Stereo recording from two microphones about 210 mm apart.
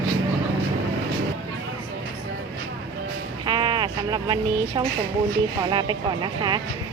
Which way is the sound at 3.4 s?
20° right (ahead or behind).